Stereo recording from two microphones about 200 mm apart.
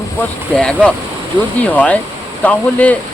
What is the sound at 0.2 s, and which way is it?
Speech, 5° left (ahead or behind).